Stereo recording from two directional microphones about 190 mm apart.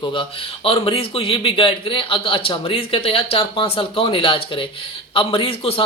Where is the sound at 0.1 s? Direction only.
30° left (ahead or behind).